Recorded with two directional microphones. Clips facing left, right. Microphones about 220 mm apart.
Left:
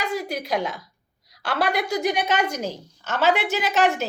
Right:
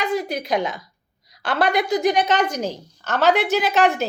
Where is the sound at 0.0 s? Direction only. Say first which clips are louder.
Right 4 dB; 5° left (ahead or behind).